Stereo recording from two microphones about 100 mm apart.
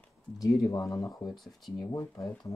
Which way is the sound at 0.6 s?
35° left (ahead or behind).